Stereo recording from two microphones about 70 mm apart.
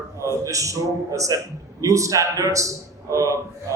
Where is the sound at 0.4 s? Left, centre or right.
Right.